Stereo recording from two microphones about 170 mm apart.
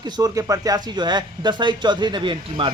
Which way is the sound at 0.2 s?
20° right (ahead or behind).